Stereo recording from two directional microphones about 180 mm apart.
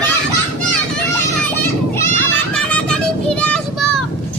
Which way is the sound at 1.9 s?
10° left (ahead or behind).